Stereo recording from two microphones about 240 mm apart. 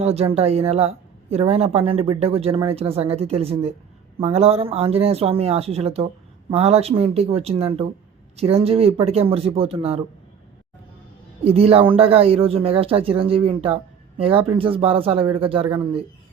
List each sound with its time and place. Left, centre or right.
0.0 s a woman's voice: right
11.4 s a woman's voice: right